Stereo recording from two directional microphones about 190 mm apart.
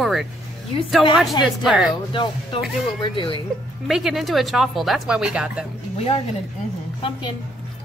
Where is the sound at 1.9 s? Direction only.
25° left (ahead or behind).